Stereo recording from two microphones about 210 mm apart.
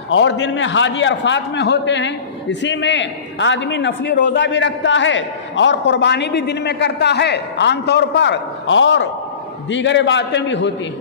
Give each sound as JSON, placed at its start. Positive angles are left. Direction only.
{"t": 0.1, "sound": "a man's voice", "side_deg": 60}